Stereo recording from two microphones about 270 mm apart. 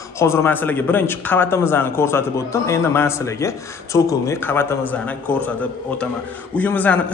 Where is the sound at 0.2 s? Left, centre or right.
Centre.